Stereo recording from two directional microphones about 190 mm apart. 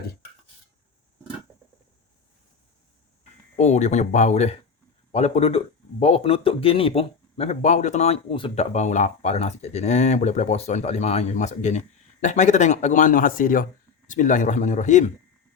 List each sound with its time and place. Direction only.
3.6 s speech: 35° left (ahead or behind)